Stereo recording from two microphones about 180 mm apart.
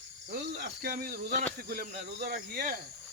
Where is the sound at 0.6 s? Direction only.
55° right (ahead or behind).